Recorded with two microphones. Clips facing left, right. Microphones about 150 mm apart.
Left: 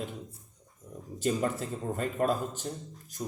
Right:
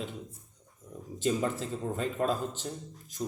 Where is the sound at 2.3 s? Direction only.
10° left (ahead or behind).